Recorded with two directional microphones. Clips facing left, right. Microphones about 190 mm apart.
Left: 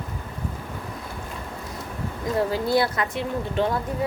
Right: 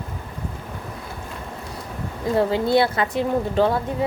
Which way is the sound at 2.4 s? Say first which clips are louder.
Right 4 dB; 25° right (ahead or behind).